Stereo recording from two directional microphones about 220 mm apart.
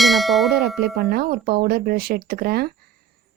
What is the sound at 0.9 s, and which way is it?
Speech, 45° right (ahead or behind).